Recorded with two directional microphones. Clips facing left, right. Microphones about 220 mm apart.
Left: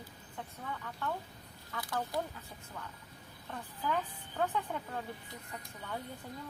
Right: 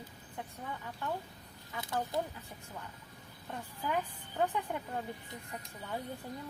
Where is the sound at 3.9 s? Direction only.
15° right (ahead or behind).